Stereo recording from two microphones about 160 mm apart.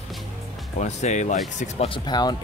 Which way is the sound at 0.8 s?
45° left (ahead or behind).